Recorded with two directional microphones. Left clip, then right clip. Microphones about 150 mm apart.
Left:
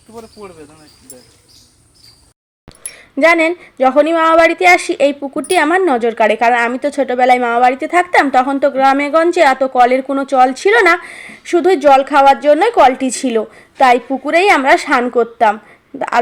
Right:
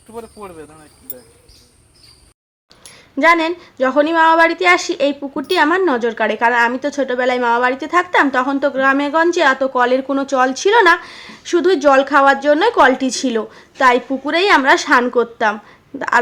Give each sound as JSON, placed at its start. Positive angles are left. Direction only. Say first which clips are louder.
{"t": 0.1, "sound": "speech", "louder": "right 1 dB", "side_deg": -50}
{"t": 2.8, "sound": "a woman's voice", "louder": "left 2 dB", "side_deg": 25}